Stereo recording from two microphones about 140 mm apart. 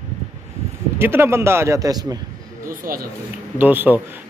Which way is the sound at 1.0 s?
15° right (ahead or behind).